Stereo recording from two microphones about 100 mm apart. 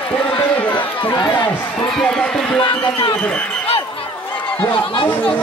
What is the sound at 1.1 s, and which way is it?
Speech, 45° left (ahead or behind).